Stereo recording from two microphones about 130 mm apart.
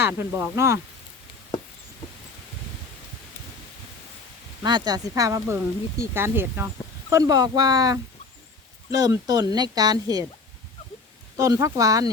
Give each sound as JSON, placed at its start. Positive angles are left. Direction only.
{"t": 0.0, "sound": "speech", "side_deg": -20}
{"t": 4.6, "sound": "speech", "side_deg": -35}
{"t": 7.1, "sound": "speech", "side_deg": -30}
{"t": 11.3, "sound": "speech", "side_deg": -25}